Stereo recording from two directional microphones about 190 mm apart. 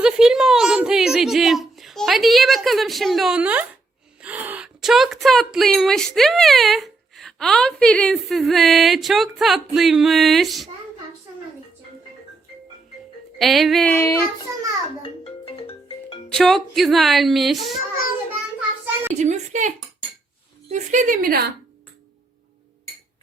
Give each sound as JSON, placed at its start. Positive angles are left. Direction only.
{"t": 0.0, "sound": "a woman's voice", "side_deg": -5}
{"t": 13.4, "sound": "a woman's voice", "side_deg": 0}
{"t": 15.0, "sound": "marimba", "side_deg": 30}
{"t": 16.3, "sound": "a woman's voice", "side_deg": 0}
{"t": 19.1, "sound": "a woman's voice", "side_deg": -40}